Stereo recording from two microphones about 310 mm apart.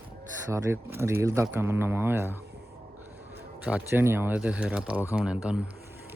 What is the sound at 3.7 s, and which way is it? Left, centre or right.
Speech, centre.